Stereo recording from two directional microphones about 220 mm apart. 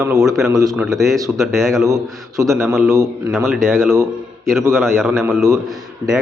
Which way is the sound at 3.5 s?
Centre (ahead or behind).